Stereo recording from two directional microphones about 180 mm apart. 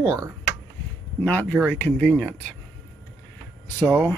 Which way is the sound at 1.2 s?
10° left (ahead or behind).